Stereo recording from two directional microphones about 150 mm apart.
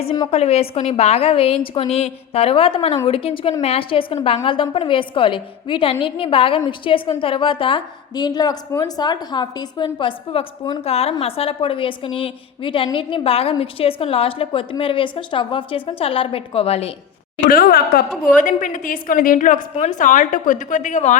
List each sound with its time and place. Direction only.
0.3 s a woman's voice: 45° left (ahead or behind)
17.4 s speech: 70° left (ahead or behind)
18.3 s a woman's voice: 60° left (ahead or behind)
19.7 s a woman's voice: 50° left (ahead or behind)